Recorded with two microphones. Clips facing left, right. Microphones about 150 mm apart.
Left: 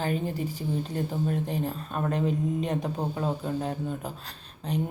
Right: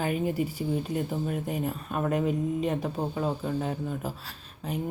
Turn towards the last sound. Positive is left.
turn(degrees=-5)  # may be behind; listen again after turning